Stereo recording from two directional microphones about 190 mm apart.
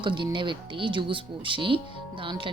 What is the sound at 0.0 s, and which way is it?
Speech, 25° right (ahead or behind).